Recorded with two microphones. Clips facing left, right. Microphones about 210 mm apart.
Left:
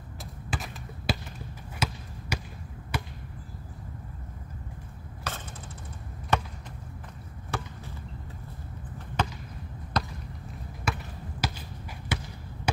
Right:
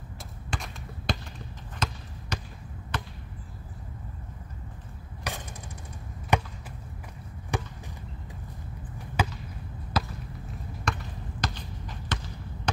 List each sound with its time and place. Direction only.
0.2 s basketball bounce: 5° left (ahead or behind)
5.3 s a sound: 15° right (ahead or behind)
6.3 s chop: 15° right (ahead or behind)
7.5 s chop: 15° right (ahead or behind)
8.9 s chop: 10° right (ahead or behind)
9.9 s basketball bounce: 5° right (ahead or behind)
10.9 s basketball bounce: 5° left (ahead or behind)